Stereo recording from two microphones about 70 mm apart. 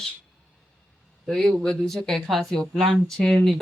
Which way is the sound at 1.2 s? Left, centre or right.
Centre.